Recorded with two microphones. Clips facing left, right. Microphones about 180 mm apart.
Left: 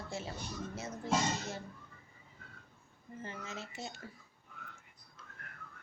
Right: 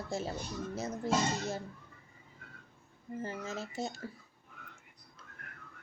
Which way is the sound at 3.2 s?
40° right (ahead or behind).